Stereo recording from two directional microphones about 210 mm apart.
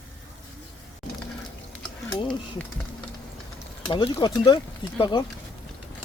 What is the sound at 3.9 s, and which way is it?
Speech, 20° left (ahead or behind).